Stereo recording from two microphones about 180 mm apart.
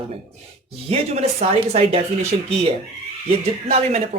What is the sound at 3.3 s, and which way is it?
Speech, 35° right (ahead or behind).